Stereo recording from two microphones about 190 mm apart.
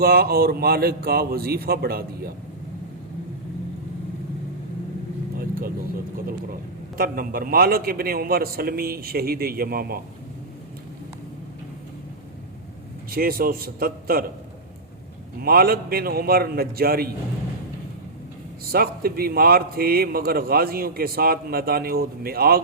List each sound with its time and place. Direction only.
0.0 s a man's voice: 55° right (ahead or behind)
5.4 s vehicle: 50° right (ahead or behind)
6.2 s a man's voice: 50° right (ahead or behind)
13.1 s a man's voice: 50° right (ahead or behind)
15.4 s a man's voice: 50° right (ahead or behind)
18.6 s a man's voice: 50° right (ahead or behind)